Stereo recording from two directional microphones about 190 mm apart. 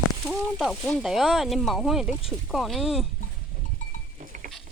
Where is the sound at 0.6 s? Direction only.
Centre (ahead or behind).